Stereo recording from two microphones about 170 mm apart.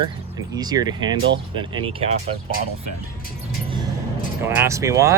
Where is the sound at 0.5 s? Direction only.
25° right (ahead or behind).